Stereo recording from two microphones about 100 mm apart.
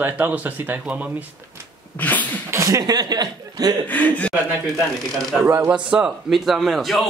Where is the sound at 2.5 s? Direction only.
35° right (ahead or behind).